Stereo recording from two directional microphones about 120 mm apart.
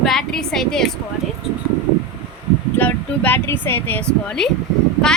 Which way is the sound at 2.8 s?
15° left (ahead or behind).